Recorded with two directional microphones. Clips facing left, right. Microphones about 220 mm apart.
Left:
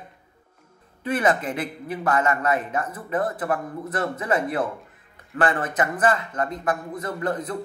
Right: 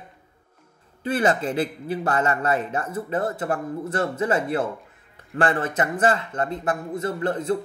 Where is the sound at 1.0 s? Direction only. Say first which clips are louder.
Right 1 dB; 30° right (ahead or behind).